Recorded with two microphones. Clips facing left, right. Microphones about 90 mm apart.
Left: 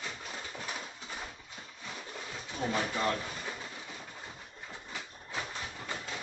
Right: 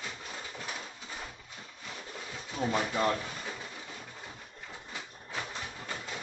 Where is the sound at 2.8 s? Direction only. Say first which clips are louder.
Right 2 dB; 15° right (ahead or behind).